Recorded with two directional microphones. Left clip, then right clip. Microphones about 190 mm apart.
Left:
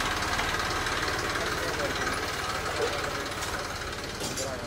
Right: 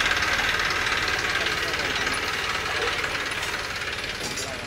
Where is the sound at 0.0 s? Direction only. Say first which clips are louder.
Right 6 dB; 60° left (ahead or behind).